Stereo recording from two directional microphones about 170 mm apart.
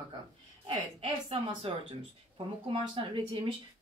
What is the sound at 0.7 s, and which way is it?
Speech, 35° right (ahead or behind).